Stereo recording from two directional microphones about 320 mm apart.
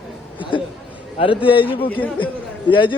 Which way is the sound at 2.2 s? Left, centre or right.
Centre.